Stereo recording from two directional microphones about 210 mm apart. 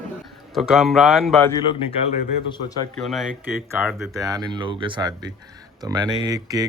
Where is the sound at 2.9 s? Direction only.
Centre (ahead or behind).